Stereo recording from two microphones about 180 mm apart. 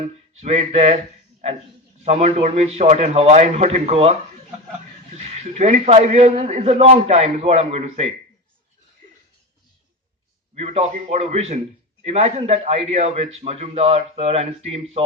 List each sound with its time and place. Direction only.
0.0 s a man's voice: 35° right (ahead or behind)
2.0 s a man's voice: 35° right (ahead or behind)
5.1 s a man's voice: 35° right (ahead or behind)
10.5 s a man's voice: 35° right (ahead or behind)